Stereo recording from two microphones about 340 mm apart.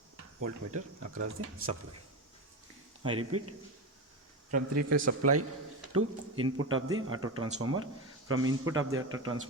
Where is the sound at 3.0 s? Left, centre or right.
Centre.